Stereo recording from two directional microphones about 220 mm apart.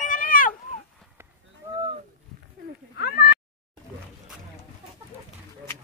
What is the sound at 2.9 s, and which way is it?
Cat, 40° left (ahead or behind).